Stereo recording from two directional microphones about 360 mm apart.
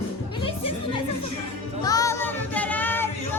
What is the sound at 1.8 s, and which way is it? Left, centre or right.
Child singing, centre.